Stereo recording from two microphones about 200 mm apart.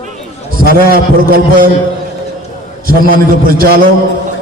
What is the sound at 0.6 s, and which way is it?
A man's voice, 45° right (ahead or behind).